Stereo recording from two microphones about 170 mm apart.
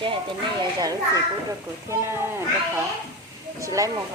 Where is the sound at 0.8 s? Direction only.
20° right (ahead or behind).